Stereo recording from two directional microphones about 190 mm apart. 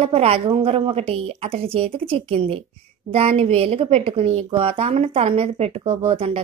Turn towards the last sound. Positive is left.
turn(degrees=-30)  # may be behind; listen again after turning